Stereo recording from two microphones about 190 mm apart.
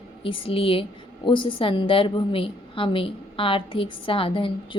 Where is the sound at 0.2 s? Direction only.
30° left (ahead or behind).